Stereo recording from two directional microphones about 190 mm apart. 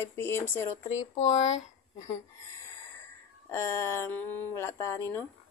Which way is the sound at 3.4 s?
15° left (ahead or behind).